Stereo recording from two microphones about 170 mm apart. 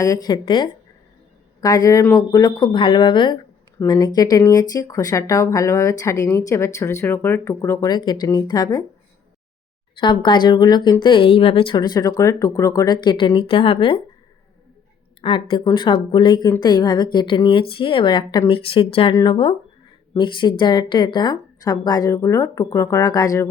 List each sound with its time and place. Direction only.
0.0 s speech: 20° left (ahead or behind)
10.0 s speech: 25° left (ahead or behind)
15.2 s speech: 30° left (ahead or behind)